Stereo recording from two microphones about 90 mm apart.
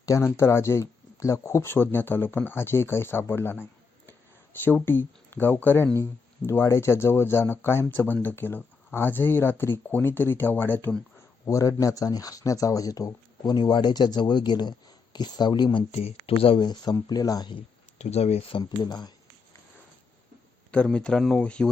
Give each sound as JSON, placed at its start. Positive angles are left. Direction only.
{"t": 0.0, "sound": "speech", "side_deg": 30}
{"t": 11.4, "sound": "speech", "side_deg": 35}
{"t": 16.6, "sound": "speech", "side_deg": 50}
{"t": 18.6, "sound": "speech", "side_deg": 50}
{"t": 20.7, "sound": "speech", "side_deg": 10}